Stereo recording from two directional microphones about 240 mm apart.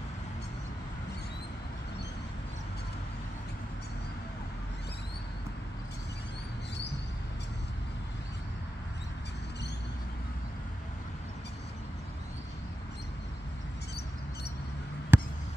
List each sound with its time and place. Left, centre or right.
15.1 s basketball bounce: centre